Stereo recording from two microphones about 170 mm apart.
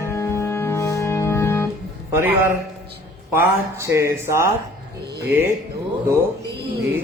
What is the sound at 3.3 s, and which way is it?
Speech, 15° right (ahead or behind).